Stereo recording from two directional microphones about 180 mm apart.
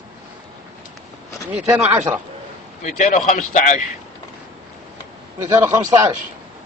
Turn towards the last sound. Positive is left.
turn(degrees=-15)  # may be behind; listen again after turning